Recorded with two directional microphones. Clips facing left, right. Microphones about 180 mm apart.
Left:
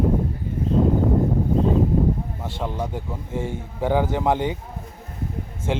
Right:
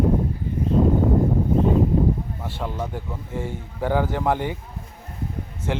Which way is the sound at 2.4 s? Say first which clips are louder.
Left 1 dB; 15° left (ahead or behind).